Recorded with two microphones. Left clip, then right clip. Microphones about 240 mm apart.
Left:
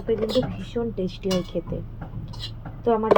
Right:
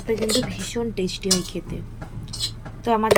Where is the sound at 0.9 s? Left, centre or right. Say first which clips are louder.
Right 3 dB; centre.